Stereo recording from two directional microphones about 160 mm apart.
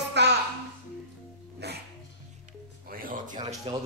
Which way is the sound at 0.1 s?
90° right.